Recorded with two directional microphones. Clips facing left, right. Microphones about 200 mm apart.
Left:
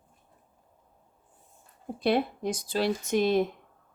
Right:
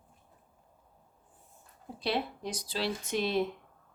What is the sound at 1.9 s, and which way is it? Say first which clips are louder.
Speech: left 7 dB; 50° left (ahead or behind).